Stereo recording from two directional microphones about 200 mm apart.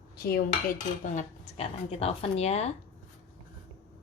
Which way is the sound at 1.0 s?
35° left (ahead or behind).